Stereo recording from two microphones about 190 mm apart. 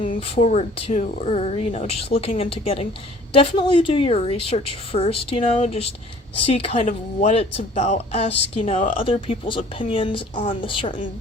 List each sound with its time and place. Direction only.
0.2 s speech: 35° left (ahead or behind)